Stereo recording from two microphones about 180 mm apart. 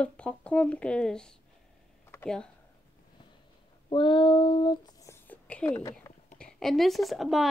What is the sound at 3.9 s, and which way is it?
Speech, 25° left (ahead or behind).